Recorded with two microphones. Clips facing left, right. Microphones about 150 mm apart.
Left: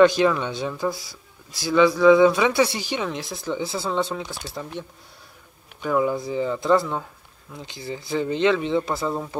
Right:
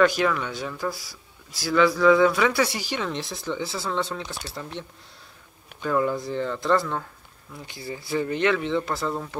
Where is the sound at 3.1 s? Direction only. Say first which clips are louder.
Even; 5° left (ahead or behind).